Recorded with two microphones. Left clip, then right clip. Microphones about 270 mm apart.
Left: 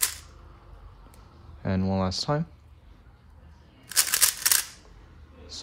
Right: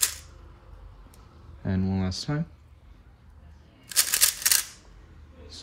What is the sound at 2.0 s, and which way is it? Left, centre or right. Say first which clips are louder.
Speech: left 5 dB; centre.